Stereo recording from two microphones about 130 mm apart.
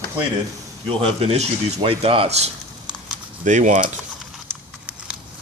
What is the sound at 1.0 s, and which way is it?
Speech, 50° right (ahead or behind).